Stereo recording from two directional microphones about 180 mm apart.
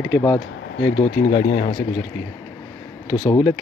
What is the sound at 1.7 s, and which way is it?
Speech, 25° left (ahead or behind).